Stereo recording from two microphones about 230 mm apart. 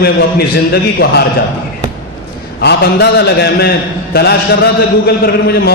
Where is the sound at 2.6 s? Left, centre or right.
Left.